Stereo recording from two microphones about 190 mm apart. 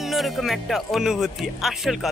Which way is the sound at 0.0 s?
Centre (ahead or behind).